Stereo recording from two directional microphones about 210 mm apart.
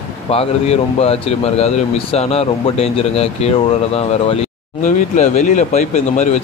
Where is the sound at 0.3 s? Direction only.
30° left (ahead or behind).